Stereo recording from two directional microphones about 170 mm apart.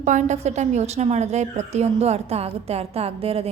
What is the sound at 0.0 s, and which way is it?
A woman's voice, 45° right (ahead or behind).